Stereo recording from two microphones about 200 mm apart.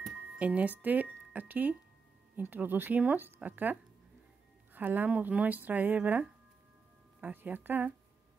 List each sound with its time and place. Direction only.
0.4 s speech: 5° right (ahead or behind)
4.7 s speech: 10° right (ahead or behind)